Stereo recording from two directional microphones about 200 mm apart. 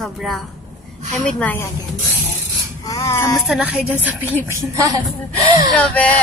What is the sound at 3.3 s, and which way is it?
Speech, 5° right (ahead or behind).